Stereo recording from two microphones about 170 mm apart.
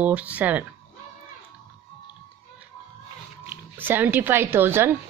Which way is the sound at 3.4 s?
10° right (ahead or behind).